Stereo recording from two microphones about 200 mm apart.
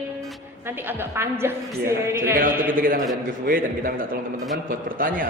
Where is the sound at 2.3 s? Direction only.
45° right (ahead or behind).